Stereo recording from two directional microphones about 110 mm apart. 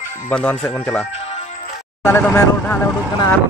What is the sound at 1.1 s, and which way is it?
Music, 70° left (ahead or behind).